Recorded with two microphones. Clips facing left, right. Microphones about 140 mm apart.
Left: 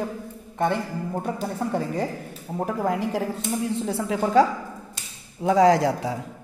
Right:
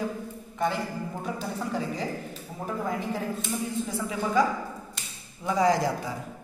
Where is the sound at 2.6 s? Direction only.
75° left (ahead or behind).